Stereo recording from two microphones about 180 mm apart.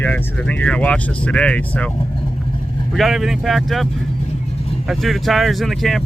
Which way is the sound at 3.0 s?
Centre (ahead or behind).